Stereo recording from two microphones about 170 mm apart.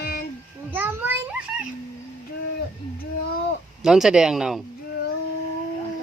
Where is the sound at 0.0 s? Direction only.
65° left (ahead or behind).